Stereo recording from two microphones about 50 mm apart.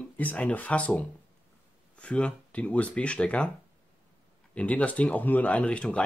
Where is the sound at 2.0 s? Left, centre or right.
Left.